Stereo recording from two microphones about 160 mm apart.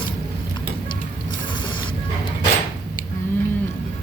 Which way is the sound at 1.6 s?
30° left (ahead or behind).